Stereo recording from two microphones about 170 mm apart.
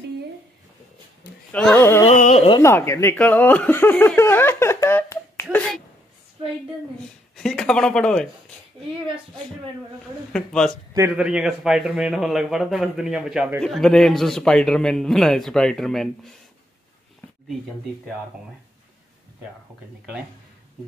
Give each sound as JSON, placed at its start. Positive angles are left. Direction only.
{"t": 1.5, "sound": "speech", "side_deg": 10}
{"t": 2.0, "sound": "a sound", "side_deg": 40}
{"t": 2.6, "sound": "speech", "side_deg": 15}
{"t": 7.3, "sound": "a man's voice", "side_deg": 5}
{"t": 10.3, "sound": "a man's voice", "side_deg": 5}